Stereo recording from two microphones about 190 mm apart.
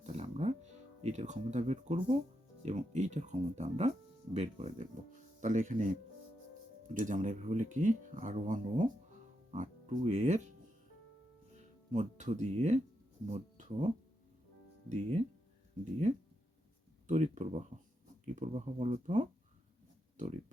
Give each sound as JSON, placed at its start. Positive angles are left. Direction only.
{"t": 0.0, "sound": "music", "side_deg": -35}
{"t": 1.0, "sound": "speech", "side_deg": -40}
{"t": 11.9, "sound": "speech", "side_deg": -40}